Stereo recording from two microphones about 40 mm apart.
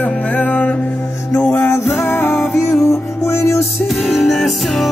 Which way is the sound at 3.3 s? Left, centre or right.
Left.